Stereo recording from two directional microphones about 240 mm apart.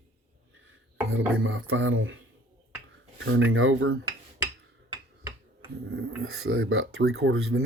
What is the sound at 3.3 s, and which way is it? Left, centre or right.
Speech, right.